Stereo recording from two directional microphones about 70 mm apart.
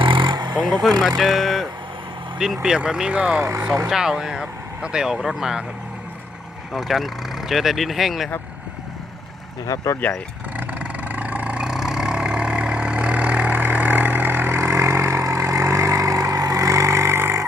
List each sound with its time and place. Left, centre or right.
0.3 s a sound: right
0.5 s speech: centre
1.0 s speech: centre
6.7 s speech: centre
9.6 s speech: left
10.6 s vehicle: right